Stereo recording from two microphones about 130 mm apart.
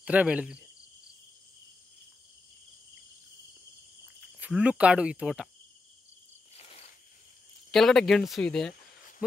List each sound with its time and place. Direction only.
0.0 s speech: 10° right (ahead or behind)
4.5 s speech: 5° right (ahead or behind)
6.5 s insect: 50° left (ahead or behind)
7.7 s speech: centre (ahead or behind)